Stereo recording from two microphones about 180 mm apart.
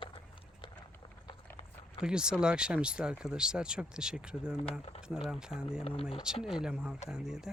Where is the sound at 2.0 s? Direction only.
5° right (ahead or behind).